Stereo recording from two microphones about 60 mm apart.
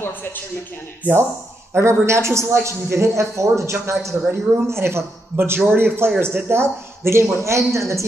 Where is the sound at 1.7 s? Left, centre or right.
Right.